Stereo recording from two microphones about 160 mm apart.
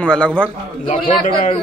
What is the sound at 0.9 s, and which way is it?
Speech, 35° left (ahead or behind).